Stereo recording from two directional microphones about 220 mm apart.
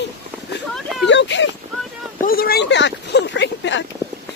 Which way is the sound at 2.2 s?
40° left (ahead or behind).